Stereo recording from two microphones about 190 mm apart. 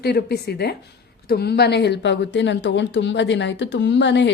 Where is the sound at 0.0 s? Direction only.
60° left (ahead or behind).